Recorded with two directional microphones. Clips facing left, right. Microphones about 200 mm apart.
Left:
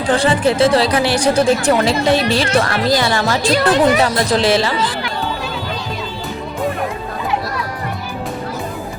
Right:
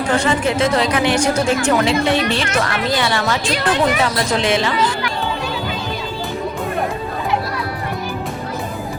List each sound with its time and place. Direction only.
0.2 s speech: 35° left (ahead or behind)